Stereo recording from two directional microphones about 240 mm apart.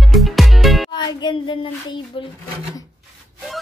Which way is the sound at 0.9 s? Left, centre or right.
Centre.